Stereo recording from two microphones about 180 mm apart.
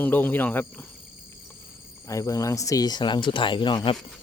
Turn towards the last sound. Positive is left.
turn(degrees=25)  # may be behind; listen again after turning